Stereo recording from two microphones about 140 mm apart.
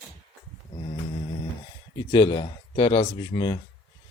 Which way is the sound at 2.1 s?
30° left (ahead or behind).